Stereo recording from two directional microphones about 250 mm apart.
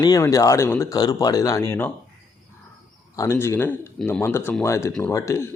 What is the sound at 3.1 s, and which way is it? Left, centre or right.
Speech, centre.